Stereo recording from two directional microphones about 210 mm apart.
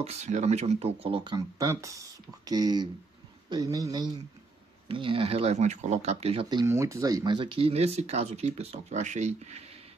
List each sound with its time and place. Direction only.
0.0 s a man's voice: 30° right (ahead or behind)
6.6 s speech: 15° right (ahead or behind); by 9.6 s 35° right (ahead or behind)